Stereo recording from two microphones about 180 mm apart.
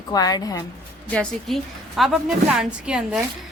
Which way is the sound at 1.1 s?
5° left (ahead or behind).